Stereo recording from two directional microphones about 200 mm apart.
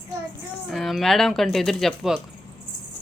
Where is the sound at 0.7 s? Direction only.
Centre (ahead or behind).